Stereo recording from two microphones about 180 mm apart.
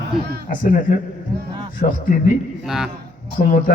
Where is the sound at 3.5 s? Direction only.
45° left (ahead or behind).